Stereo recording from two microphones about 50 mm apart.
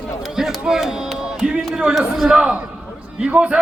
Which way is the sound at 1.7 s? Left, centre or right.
Centre.